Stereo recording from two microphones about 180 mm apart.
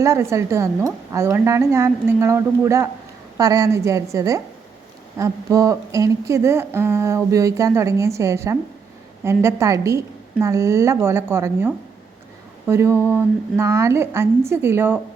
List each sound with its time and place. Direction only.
0.0 s a woman's voice: 15° right (ahead or behind)